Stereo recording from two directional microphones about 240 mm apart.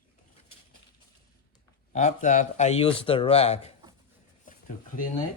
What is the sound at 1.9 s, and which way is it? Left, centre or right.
Speech, left.